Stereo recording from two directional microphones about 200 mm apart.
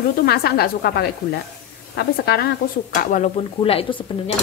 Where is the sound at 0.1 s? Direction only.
50° left (ahead or behind).